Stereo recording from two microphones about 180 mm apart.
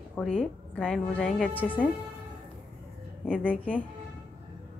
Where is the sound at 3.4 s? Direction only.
10° left (ahead or behind).